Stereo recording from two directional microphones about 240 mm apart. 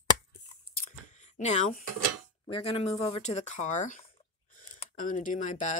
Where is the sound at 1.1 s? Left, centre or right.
Left.